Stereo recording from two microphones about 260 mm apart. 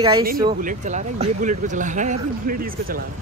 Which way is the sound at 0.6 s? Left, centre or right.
Right.